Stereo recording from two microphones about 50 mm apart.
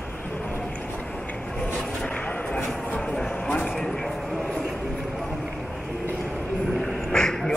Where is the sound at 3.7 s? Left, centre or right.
Centre.